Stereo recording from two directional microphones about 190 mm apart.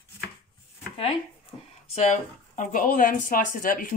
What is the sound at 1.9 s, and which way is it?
Speech, 40° left (ahead or behind).